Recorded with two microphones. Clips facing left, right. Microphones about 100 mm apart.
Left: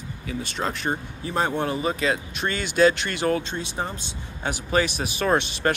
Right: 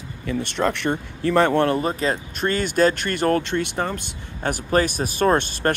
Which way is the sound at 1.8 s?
40° right (ahead or behind).